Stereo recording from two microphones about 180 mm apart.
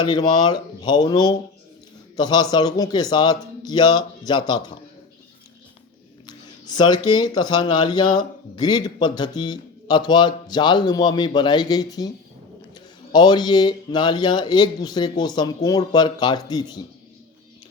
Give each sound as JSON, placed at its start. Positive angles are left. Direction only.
{"t": 0.0, "sound": "speech", "side_deg": 25}
{"t": 6.2, "sound": "speech", "side_deg": 25}
{"t": 13.1, "sound": "speech", "side_deg": 25}